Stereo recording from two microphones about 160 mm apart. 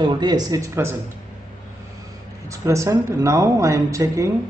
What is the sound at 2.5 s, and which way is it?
A man's voice, 20° right (ahead or behind).